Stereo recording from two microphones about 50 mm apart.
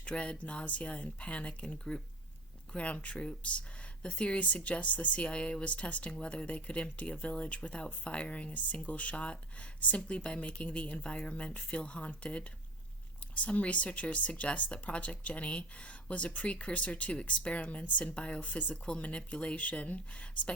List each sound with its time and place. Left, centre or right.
0.0 s speech: left
2.7 s speech: left